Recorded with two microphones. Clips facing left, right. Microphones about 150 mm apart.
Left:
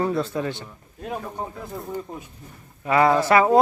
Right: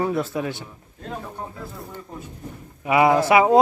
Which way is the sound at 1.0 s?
15° left (ahead or behind).